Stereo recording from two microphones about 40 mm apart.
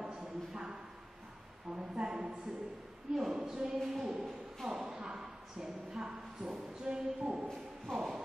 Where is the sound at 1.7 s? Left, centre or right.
Right.